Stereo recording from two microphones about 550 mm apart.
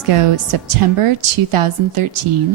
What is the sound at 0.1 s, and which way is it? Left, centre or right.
Speech, right.